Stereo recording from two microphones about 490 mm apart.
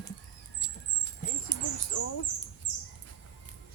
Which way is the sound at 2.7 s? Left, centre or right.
Left.